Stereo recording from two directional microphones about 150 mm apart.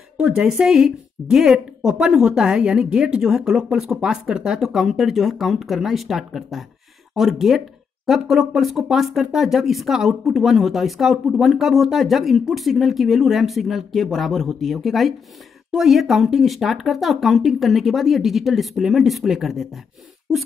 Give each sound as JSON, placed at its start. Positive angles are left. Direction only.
{"t": 0.2, "sound": "speech", "side_deg": -5}